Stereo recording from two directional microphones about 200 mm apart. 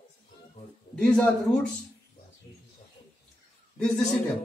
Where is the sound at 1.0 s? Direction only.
5° left (ahead or behind).